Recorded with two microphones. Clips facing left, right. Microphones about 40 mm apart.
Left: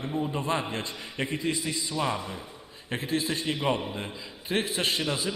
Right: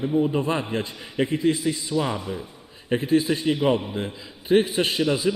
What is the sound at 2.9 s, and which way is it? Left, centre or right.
Speech, centre.